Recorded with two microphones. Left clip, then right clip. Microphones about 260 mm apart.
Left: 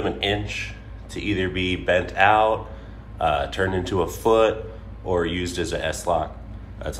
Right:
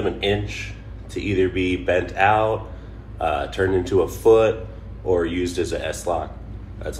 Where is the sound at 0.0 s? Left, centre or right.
Left.